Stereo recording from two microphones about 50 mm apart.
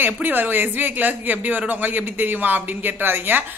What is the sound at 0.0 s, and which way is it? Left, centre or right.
Speech, right.